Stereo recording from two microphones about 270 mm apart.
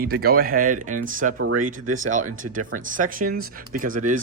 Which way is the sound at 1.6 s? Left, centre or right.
Right.